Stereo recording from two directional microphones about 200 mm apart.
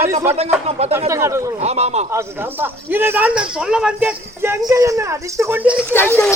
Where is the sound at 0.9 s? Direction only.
15° right (ahead or behind).